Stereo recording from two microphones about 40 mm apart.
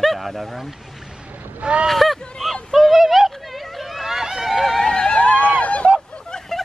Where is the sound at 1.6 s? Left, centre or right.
Right.